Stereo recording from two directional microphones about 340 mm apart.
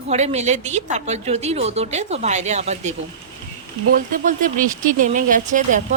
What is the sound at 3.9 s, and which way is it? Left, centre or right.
Speech, right.